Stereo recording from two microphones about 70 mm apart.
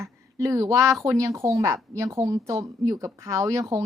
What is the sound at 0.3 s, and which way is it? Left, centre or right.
Speech, right.